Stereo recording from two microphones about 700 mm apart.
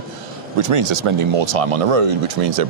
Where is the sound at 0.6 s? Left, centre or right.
Right.